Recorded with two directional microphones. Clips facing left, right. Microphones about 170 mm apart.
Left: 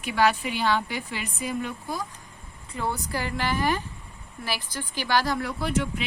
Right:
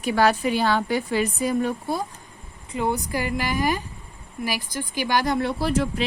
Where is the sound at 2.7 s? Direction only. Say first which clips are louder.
Right 5 dB; 15° right (ahead or behind).